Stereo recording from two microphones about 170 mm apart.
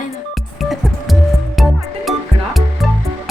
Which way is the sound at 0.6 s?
Centre (ahead or behind).